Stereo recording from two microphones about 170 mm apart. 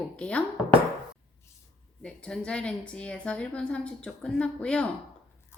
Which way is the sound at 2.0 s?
5° left (ahead or behind).